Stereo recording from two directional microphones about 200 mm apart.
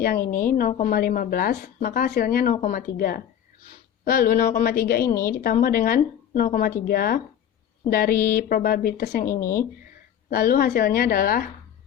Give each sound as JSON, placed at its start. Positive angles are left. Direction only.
{"t": 0.0, "sound": "a woman's voice", "side_deg": 45}
{"t": 9.2, "sound": "speech", "side_deg": 15}
{"t": 10.2, "sound": "a woman's voice", "side_deg": 45}